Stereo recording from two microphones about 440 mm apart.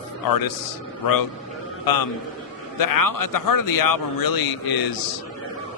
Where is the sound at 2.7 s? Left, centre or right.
Left.